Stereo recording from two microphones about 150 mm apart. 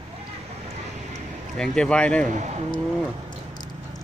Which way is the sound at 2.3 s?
50° right (ahead or behind).